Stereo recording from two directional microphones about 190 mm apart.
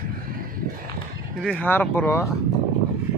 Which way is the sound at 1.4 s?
10° left (ahead or behind).